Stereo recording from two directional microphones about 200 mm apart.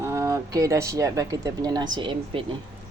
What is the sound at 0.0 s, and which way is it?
Speech, 15° right (ahead or behind).